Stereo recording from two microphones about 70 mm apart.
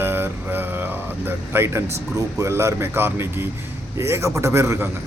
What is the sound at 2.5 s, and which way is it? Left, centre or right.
Speech, right.